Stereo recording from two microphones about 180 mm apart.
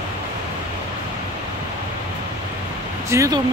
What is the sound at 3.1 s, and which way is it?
Speech, 15° right (ahead or behind).